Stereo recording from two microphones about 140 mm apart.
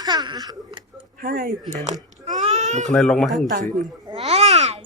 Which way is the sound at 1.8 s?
60° right (ahead or behind).